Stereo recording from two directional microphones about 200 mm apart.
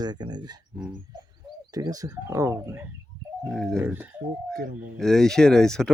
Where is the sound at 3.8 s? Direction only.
10° right (ahead or behind).